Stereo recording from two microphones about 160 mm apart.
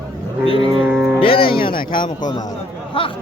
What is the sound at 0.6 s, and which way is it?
Cattle, 30° right (ahead or behind).